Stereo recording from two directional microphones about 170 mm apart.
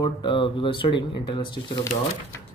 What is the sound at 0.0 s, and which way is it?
Speech, 25° left (ahead or behind).